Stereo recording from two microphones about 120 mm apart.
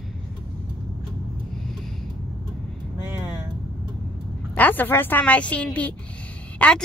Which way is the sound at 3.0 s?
20° right (ahead or behind).